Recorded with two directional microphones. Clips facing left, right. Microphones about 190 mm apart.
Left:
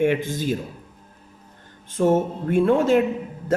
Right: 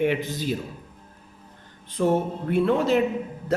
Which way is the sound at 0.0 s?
50° left (ahead or behind).